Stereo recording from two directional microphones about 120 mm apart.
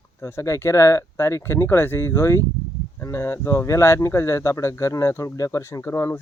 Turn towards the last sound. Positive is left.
turn(degrees=20)  # may be behind; listen again after turning